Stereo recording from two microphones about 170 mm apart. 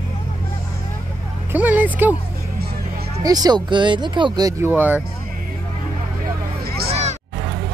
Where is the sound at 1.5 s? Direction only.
10° right (ahead or behind).